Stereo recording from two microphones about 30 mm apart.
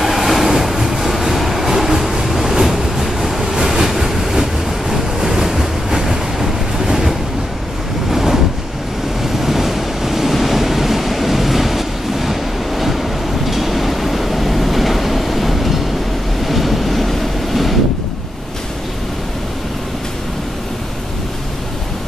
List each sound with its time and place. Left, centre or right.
0.0 s waves: centre
0.8 s train: centre
3.9 s waves: centre
13.5 s train: centre